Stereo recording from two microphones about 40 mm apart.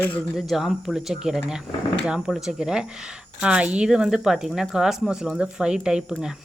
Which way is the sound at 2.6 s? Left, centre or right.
Centre.